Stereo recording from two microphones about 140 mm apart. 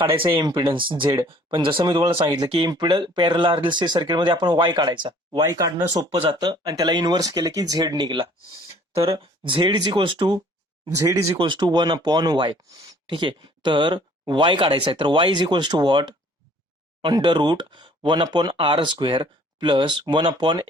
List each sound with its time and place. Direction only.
0.3 s speech: 30° right (ahead or behind)
6.1 s speech: 40° right (ahead or behind)
6.5 s speech: 25° right (ahead or behind)
10.9 s speech: 20° right (ahead or behind)
11.3 s speech: 35° right (ahead or behind)